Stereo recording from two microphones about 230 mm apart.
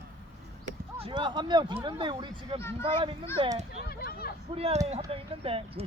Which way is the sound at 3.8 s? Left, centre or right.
Left.